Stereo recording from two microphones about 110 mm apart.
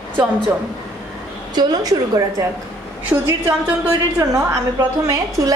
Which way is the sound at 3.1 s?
20° right (ahead or behind).